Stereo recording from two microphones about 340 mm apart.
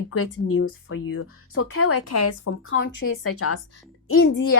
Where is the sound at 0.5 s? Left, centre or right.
Left.